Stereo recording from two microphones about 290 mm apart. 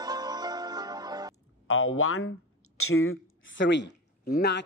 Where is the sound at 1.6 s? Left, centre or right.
Left.